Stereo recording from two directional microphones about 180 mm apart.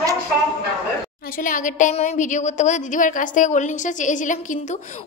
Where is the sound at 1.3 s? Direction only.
45° left (ahead or behind).